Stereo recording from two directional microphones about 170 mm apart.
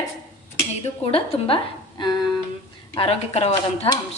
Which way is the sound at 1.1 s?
30° left (ahead or behind).